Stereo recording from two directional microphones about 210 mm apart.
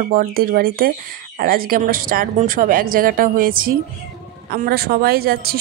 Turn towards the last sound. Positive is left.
turn(degrees=-45)  # may be behind; listen again after turning